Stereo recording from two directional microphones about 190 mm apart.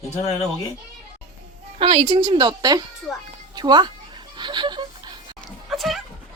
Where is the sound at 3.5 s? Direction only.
20° right (ahead or behind).